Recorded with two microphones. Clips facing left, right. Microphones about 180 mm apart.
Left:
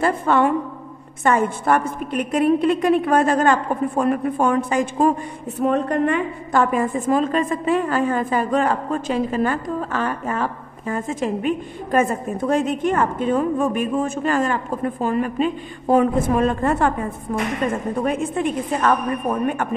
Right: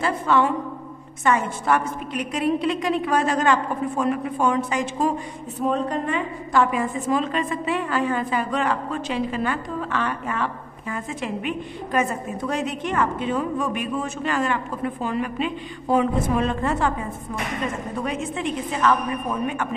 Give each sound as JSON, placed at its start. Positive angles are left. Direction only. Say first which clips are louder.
{"t": 0.0, "sound": "a woman's voice", "louder": "left 3 dB", "side_deg": 55}
{"t": 17.9, "sound": "a woman's voice", "louder": "left 5 dB", "side_deg": 50}